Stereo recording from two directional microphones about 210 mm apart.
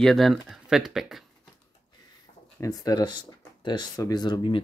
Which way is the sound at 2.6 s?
15° left (ahead or behind).